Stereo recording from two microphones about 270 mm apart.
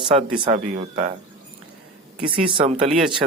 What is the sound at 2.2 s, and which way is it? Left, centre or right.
Speech, centre.